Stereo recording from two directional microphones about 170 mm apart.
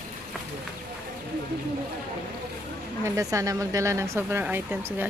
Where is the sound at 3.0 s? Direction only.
15° right (ahead or behind).